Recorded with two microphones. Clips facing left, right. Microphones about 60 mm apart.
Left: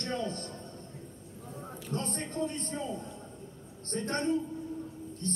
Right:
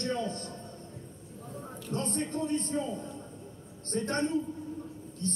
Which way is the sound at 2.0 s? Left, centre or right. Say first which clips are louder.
Right 3 dB; left.